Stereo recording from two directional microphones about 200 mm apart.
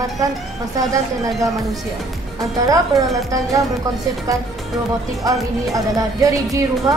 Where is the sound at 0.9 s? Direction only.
15° right (ahead or behind).